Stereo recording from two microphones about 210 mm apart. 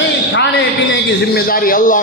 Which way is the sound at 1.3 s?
45° left (ahead or behind).